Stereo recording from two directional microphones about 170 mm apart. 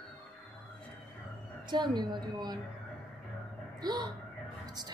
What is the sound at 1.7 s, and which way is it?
Speech, 25° right (ahead or behind).